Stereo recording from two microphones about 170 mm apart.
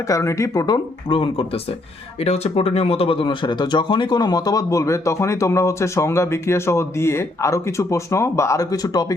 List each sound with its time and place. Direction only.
0.1 s speech: 15° left (ahead or behind)